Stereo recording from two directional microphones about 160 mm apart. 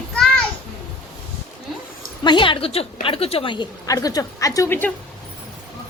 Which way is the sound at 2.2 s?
30° left (ahead or behind).